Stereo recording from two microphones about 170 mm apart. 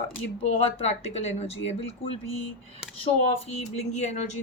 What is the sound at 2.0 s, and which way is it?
Speech, 90° left.